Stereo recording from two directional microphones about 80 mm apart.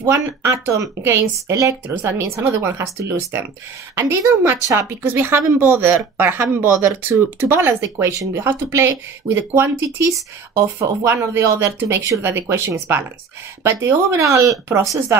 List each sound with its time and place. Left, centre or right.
0.1 s speech: right
2.0 s speech: right
8.1 s speech: right